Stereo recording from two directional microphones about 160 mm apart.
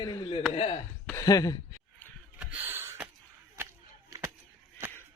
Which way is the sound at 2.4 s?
10° right (ahead or behind).